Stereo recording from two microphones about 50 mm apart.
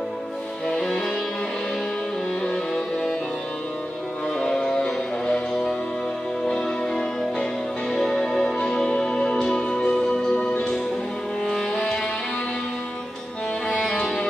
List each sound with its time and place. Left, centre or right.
0.7 s music: centre
2.4 s music: centre
4.4 s music: centre
11.7 s music: left
13.8 s music: centre